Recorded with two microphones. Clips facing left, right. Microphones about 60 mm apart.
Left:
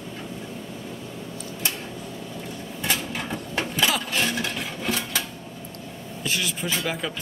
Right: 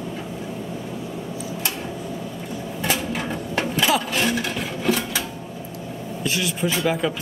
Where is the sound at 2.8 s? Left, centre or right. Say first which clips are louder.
Right 3 dB; centre.